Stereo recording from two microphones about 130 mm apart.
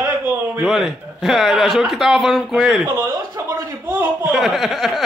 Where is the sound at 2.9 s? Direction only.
30° right (ahead or behind).